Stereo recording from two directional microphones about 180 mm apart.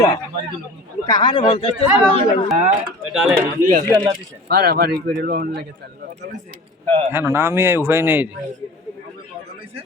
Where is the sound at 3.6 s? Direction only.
50° right (ahead or behind).